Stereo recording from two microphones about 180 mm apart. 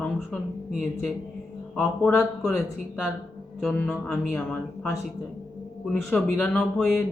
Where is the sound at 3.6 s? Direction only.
5° left (ahead or behind).